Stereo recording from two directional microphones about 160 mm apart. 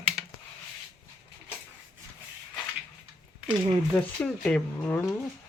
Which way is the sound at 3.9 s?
5° left (ahead or behind).